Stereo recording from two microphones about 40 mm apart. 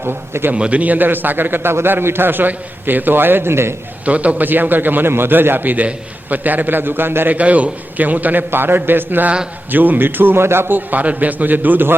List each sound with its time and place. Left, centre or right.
0.0 s a man's voice: right
0.5 s a man's voice: right
0.8 s a man's voice: right
4.0 s a man's voice: right
4.4 s a man's voice: right
7.3 s a man's voice: right
8.4 s a man's voice: right
9.7 s a man's voice: right
10.8 s a man's voice: right